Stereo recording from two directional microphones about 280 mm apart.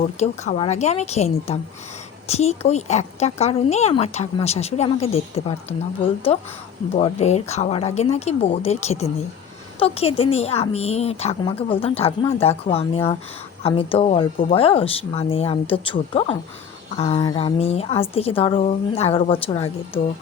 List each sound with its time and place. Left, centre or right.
0.0 s speech: left